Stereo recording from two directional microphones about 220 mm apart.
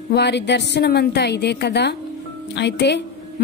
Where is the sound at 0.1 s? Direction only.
50° left (ahead or behind).